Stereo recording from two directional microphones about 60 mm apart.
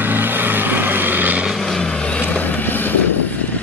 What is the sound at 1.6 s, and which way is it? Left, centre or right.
Vehicle, centre.